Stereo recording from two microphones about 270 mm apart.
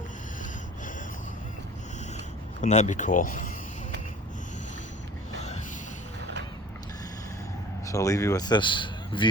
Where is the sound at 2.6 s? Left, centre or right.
Left.